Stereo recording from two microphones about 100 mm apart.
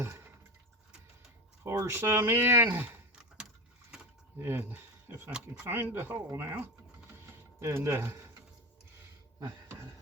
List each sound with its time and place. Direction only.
1.6 s speech: 30° right (ahead or behind)
4.4 s speech: 25° right (ahead or behind)
7.2 s a sound: 25° right (ahead or behind)